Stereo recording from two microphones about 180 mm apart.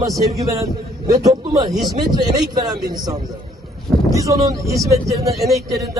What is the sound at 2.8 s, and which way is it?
A man's voice, 20° right (ahead or behind).